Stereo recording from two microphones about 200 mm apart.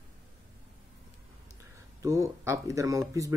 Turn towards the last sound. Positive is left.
turn(degrees=-15)  # may be behind; listen again after turning